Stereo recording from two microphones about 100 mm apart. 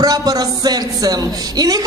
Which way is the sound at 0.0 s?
35° right (ahead or behind).